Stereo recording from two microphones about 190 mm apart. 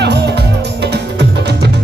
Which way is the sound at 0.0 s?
60° right (ahead or behind).